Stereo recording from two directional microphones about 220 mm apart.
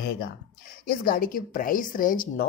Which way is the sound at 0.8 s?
40° left (ahead or behind).